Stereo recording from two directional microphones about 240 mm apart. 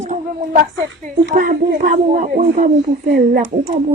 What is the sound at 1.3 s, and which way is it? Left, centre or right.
Speech, right.